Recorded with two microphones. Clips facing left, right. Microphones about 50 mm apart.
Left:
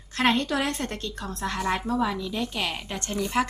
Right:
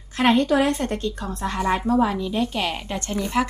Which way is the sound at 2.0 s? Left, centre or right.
Right.